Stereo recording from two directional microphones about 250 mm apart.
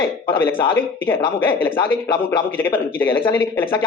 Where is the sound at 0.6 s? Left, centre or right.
Centre.